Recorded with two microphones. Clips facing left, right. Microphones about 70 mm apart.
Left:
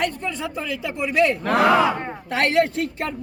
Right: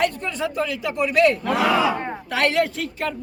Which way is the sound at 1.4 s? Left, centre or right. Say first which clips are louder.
Left 2 dB; left.